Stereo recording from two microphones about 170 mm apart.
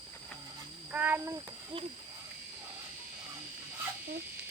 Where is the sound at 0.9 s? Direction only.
10° right (ahead or behind).